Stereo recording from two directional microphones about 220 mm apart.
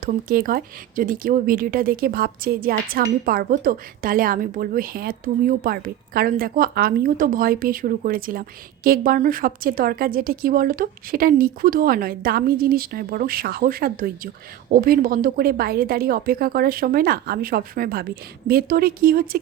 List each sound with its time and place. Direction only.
0.0 s a woman's voice: 40° right (ahead or behind)